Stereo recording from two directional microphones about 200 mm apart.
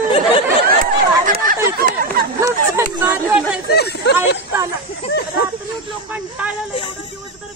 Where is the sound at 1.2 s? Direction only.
45° right (ahead or behind).